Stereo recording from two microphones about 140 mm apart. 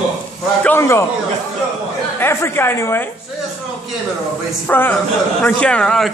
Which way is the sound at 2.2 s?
15° left (ahead or behind).